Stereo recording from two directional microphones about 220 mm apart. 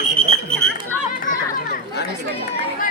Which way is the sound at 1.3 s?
40° left (ahead or behind).